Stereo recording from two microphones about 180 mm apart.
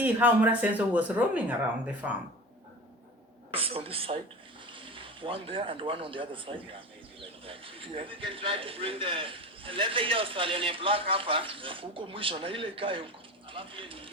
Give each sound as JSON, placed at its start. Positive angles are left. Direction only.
{"t": 0.0, "sound": "speech", "side_deg": -10}
{"t": 3.5, "sound": "a man's voice", "side_deg": -30}